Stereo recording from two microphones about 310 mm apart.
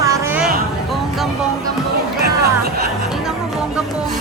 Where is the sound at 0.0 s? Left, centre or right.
Centre.